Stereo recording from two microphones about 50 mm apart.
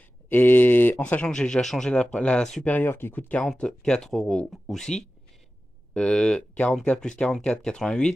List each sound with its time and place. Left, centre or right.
0.3 s a sound: left
0.9 s speech: left
1.3 s speech: centre
2.6 s speech: left
2.9 s speech: left
3.5 s speech: centre
5.9 s speech: centre